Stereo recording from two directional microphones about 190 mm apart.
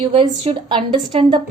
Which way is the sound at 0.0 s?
30° right (ahead or behind).